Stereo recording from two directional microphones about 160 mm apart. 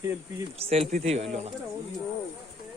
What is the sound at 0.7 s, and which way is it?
Speech, 40° right (ahead or behind).